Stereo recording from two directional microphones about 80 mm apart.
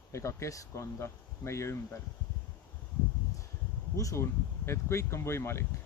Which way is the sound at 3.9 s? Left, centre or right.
Left.